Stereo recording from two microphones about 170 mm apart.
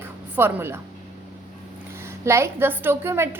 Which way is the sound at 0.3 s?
15° right (ahead or behind).